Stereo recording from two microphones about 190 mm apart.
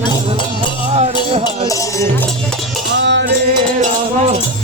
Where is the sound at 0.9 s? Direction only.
30° right (ahead or behind).